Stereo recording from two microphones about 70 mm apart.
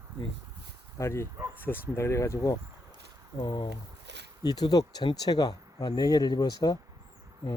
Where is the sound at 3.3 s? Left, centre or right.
Left.